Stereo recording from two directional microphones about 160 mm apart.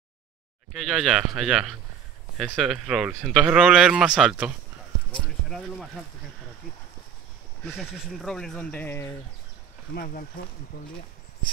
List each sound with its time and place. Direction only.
0.7 s speech: centre (ahead or behind)
7.6 s speech: centre (ahead or behind)
9.9 s speech: 65° left (ahead or behind)